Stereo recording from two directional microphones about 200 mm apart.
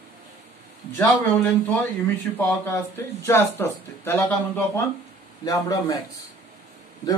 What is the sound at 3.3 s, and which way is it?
Speech, 10° left (ahead or behind).